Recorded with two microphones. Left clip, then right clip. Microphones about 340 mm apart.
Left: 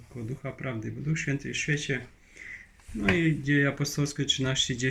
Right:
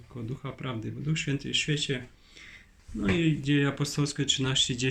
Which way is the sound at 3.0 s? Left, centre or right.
Centre.